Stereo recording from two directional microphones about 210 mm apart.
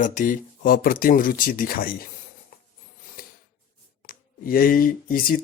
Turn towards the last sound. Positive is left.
turn(degrees=45)  # may be behind; listen again after turning